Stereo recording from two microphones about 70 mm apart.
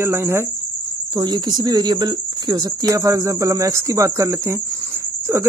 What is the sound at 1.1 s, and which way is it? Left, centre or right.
Speech, right.